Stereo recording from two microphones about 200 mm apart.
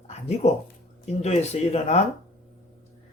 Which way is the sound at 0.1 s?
35° left (ahead or behind).